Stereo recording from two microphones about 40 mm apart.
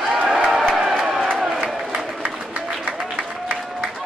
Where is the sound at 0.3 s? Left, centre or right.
Centre.